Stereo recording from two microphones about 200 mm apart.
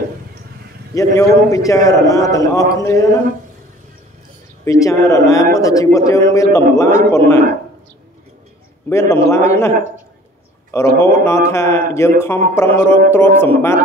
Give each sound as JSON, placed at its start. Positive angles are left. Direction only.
{"t": 0.9, "sound": "a man's voice", "side_deg": 15}
{"t": 4.8, "sound": "a man's voice", "side_deg": 15}
{"t": 8.8, "sound": "a man's voice", "side_deg": 15}